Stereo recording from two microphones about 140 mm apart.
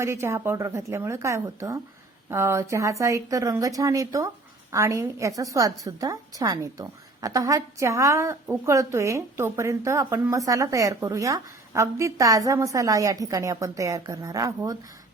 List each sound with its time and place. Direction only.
0.0 s a woman's voice: 20° right (ahead or behind)